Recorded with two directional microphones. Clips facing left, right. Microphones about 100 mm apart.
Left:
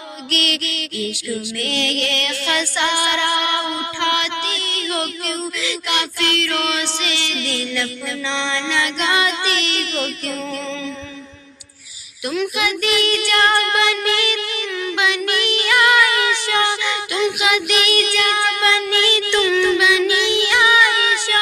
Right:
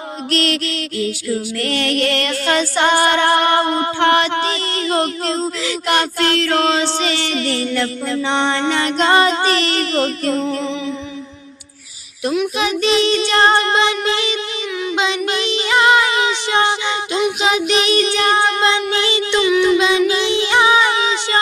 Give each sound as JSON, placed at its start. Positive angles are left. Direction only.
{"t": 0.3, "sound": "music", "side_deg": -35}
{"t": 12.5, "sound": "child singing", "side_deg": -30}
{"t": 14.8, "sound": "music", "side_deg": -25}